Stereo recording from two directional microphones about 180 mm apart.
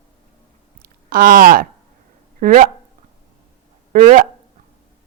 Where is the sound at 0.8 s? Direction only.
50° right (ahead or behind).